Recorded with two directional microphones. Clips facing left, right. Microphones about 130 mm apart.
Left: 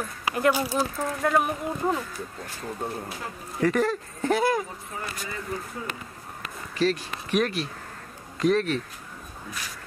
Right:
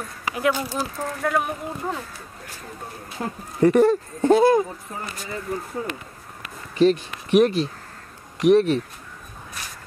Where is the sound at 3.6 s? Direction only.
25° right (ahead or behind).